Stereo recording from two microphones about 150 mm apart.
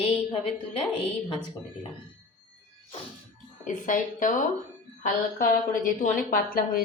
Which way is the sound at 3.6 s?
60° left (ahead or behind).